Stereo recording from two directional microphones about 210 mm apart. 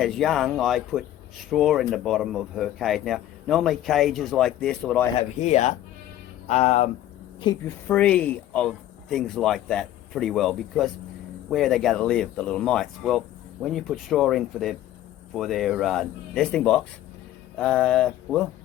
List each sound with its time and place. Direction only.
0.0 s speech: centre (ahead or behind)
5.4 s speech: 35° left (ahead or behind)
7.9 s speech: 5° left (ahead or behind)